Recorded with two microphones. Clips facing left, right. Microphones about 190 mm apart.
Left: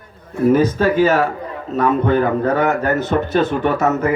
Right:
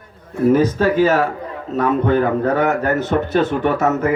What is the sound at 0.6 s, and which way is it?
Speech, 35° right (ahead or behind).